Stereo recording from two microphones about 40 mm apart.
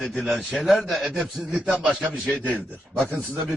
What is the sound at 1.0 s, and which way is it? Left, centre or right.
Speech, centre.